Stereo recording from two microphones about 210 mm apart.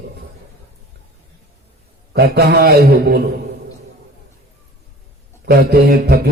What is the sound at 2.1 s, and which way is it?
Speech, 50° right (ahead or behind).